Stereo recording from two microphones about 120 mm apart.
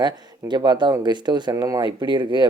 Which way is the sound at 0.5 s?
40° right (ahead or behind).